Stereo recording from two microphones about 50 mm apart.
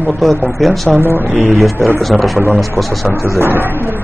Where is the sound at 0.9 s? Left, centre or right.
Right.